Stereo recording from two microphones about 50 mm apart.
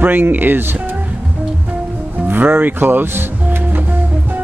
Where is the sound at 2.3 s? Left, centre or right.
Right.